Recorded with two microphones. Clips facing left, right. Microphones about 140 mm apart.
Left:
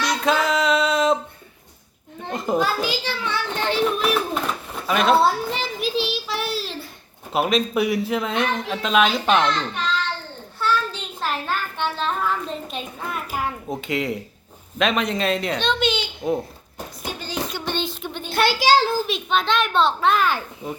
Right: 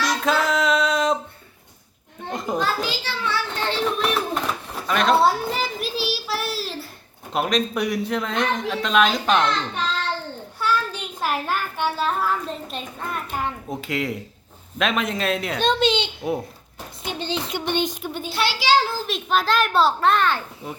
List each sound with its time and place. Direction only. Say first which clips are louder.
0.0 s music: left 1 dB; centre (ahead or behind)
2.3 s children playing: left 3 dB; centre (ahead or behind)
2.8 s a child's voice: left 1 dB; 15° left (ahead or behind)
4.7 s child singing: left 1 dB; 5° left (ahead or behind)
7.3 s a man's voice: left 2 dB; 5° left (ahead or behind)
10.6 s a sound: left 1 dB; 10° right (ahead or behind)
14.8 s a man's voice: left 2 dB; centre (ahead or behind)
15.6 s a child's voice: right 7 dB; 35° right (ahead or behind)
17.0 s a sound: right 2 dB; 25° right (ahead or behind); by 18.3 s 5° right (ahead or behind)
18.3 s a child's voice: left 3 dB; 50° left (ahead or behind)
18.9 s a man's voice: left 1 dB; centre (ahead or behind)